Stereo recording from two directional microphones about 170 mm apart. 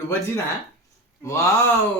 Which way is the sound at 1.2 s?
15° left (ahead or behind).